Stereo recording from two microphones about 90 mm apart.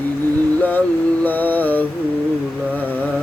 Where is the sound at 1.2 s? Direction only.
20° left (ahead or behind).